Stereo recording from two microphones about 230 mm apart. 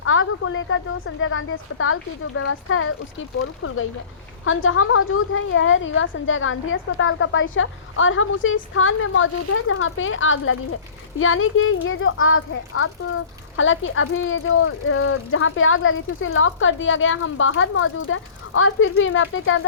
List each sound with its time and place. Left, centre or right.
0.0 s a woman's voice: left